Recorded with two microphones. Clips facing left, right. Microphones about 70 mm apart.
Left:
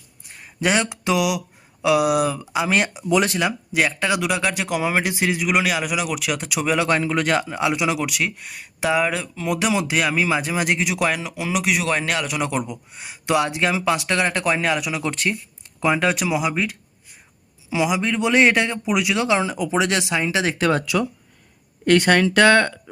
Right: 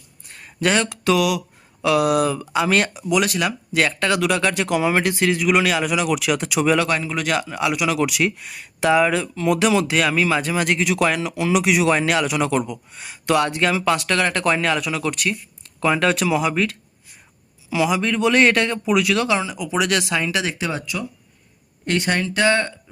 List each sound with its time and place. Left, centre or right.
0.3 s speech: centre
3.1 s speech: left
3.7 s speech: centre
6.8 s a man's voice: left
7.9 s speech: centre
15.0 s speech: left
15.8 s speech: centre
19.4 s a man's voice: left
19.7 s speech: left
20.4 s a man's voice: left
20.7 s speech: left
21.8 s speech: left